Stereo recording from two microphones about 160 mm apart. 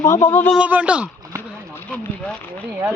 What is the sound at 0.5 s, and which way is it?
Speech, 10° right (ahead or behind).